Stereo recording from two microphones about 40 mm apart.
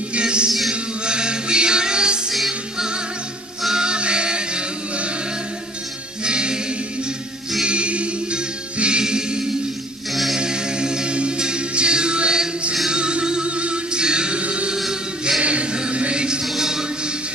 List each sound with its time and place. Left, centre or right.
0.1 s music: right
3.7 s music: right
6.2 s music: right
7.6 s music: right
14.9 s choir: centre
15.4 s music: right
16.4 s music: centre